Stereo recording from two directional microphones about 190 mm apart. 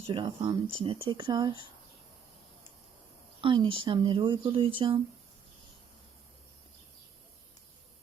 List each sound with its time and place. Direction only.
0.1 s speech: 25° right (ahead or behind)
3.4 s speech: 25° right (ahead or behind)